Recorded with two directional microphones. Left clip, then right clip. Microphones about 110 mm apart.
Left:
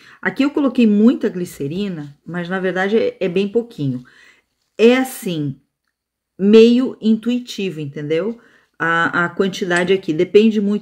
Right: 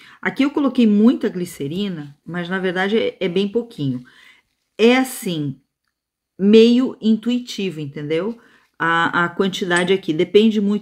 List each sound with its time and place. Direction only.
0.0 s speech: 15° right (ahead or behind)